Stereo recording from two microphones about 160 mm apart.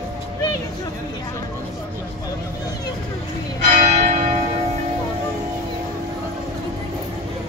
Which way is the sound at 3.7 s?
40° right (ahead or behind).